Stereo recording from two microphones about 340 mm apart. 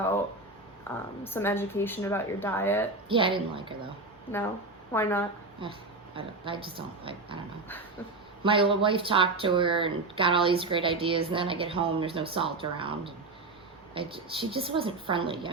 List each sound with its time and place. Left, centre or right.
1.2 s speech: centre
3.1 s speech: centre
4.9 s speech: centre
5.6 s speech: centre
8.4 s speech: centre